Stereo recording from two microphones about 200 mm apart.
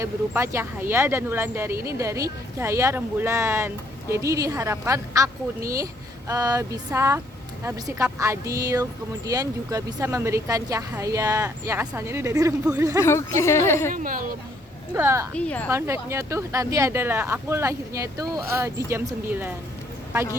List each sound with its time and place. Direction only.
0.0 s speech: 15° right (ahead or behind)
13.0 s a woman's voice: 15° left (ahead or behind)
13.9 s a woman's voice: 45° right (ahead or behind)
14.9 s speech: 10° right (ahead or behind)
15.4 s a woman's voice: 5° left (ahead or behind)
15.7 s speech: 15° right (ahead or behind)